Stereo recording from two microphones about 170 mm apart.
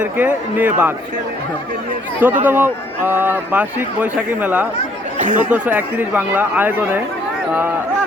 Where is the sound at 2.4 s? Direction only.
10° right (ahead or behind).